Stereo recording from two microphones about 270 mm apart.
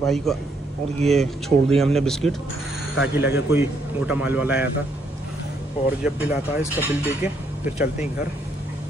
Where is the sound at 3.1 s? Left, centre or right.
Centre.